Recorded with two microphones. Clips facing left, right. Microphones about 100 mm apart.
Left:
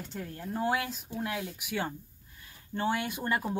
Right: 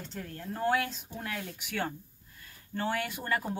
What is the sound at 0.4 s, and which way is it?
Speech, 10° left (ahead or behind).